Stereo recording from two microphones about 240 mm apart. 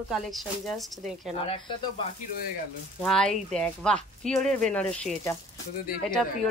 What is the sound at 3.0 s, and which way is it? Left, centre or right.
Speech, centre.